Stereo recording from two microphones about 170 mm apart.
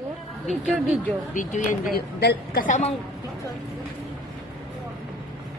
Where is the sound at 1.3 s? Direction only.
50° left (ahead or behind).